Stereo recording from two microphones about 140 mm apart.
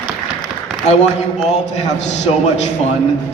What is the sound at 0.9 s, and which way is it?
Speech, 50° left (ahead or behind).